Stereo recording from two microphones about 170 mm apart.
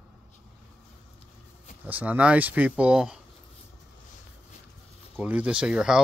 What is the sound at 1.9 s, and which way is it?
Speech, 10° right (ahead or behind).